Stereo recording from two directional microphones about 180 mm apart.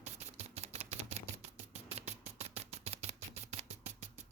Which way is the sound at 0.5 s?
35° right (ahead or behind).